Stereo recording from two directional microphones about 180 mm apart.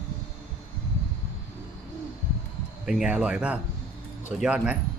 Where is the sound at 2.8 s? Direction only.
5° right (ahead or behind).